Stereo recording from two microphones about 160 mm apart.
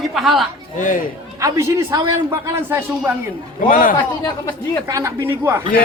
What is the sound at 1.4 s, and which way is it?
A woman's voice, 20° right (ahead or behind).